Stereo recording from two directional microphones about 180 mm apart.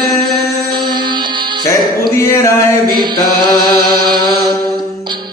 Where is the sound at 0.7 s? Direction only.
25° right (ahead or behind).